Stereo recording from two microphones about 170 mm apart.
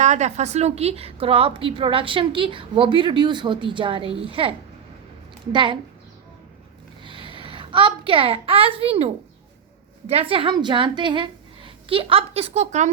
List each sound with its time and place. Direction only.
0.0 s a woman's voice: 45° right (ahead or behind)
7.0 s a sound: 30° right (ahead or behind)
10.1 s a woman's voice: 35° right (ahead or behind)